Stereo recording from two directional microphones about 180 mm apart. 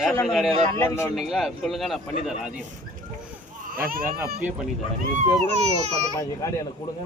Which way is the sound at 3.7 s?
55° right (ahead or behind).